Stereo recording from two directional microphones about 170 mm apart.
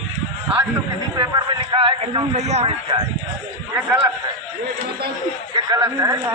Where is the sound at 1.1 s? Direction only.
25° right (ahead or behind).